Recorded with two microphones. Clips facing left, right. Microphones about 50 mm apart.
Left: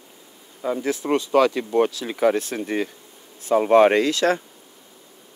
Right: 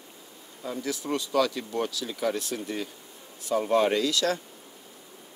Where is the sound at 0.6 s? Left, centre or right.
Left.